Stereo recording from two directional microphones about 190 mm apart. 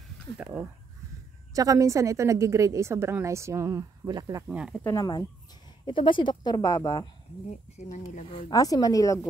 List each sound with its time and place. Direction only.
1.5 s a woman's voice: 20° right (ahead or behind)
4.5 s speech: 5° right (ahead or behind)
4.8 s speech: 20° left (ahead or behind)
7.7 s speech: 40° left (ahead or behind)
8.5 s speech: 20° left (ahead or behind)